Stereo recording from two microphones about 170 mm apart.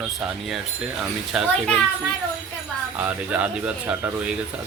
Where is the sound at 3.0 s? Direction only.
10° right (ahead or behind).